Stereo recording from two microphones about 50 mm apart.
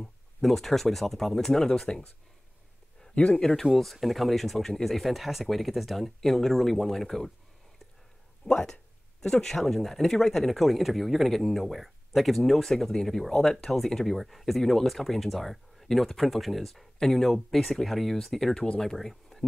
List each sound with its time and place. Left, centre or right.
0.0 s speech: centre
3.2 s speech: centre
3.6 s speech: centre
8.5 s speech: centre